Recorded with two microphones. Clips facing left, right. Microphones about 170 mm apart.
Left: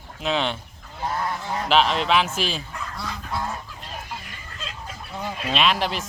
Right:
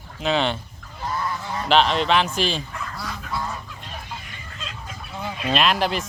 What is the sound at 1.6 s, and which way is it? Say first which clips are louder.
Goose: right 2 dB; centre (ahead or behind).